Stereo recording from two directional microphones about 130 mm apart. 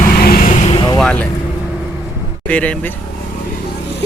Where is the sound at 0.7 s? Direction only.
40° left (ahead or behind).